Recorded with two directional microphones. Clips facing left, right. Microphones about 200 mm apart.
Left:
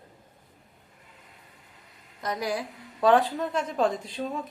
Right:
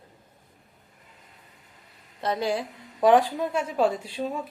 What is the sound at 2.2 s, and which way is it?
Speech, 30° right (ahead or behind).